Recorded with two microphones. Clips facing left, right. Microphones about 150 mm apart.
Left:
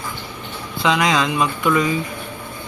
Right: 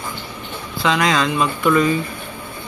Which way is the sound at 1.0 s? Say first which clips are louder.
Right 2 dB; 20° left (ahead or behind).